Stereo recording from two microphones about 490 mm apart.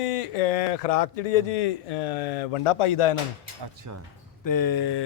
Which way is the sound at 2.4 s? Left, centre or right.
Left.